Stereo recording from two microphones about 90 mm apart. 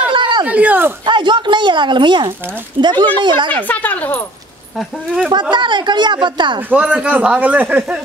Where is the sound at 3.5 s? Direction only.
20° left (ahead or behind).